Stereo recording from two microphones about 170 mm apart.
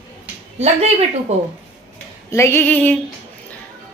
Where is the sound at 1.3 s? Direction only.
40° right (ahead or behind).